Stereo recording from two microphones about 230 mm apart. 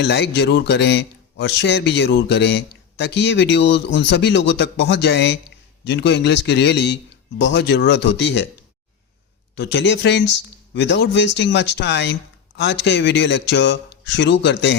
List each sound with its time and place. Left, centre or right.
0.0 s a man's voice: left
9.6 s a man's voice: left